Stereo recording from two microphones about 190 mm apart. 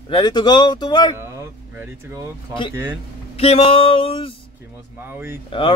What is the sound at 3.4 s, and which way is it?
Speech, 30° left (ahead or behind).